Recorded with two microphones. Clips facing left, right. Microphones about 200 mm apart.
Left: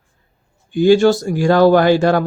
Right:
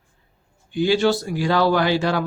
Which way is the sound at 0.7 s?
45° left (ahead or behind).